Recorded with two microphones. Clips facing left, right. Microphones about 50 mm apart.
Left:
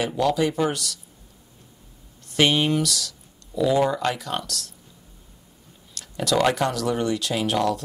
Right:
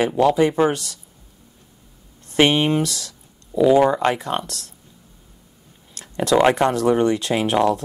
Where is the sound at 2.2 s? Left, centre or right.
Right.